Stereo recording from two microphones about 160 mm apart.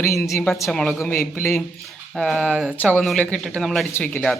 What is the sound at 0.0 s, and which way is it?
Speech, 15° left (ahead or behind).